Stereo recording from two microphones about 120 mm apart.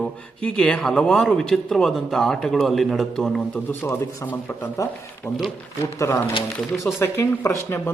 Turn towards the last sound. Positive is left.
turn(degrees=20)  # may be behind; listen again after turning